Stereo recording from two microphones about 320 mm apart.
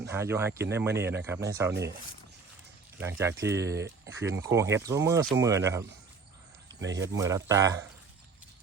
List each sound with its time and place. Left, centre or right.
0.0 s speech: centre
3.0 s speech: centre
6.7 s speech: right
7.1 s speech: centre